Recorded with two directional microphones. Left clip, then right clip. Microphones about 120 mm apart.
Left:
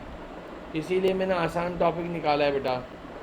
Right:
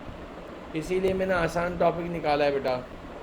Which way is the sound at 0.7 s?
20° left (ahead or behind).